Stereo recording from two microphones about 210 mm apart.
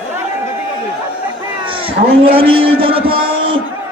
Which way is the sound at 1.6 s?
25° right (ahead or behind).